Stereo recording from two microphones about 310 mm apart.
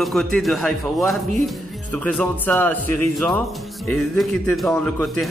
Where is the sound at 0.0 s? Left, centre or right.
Centre.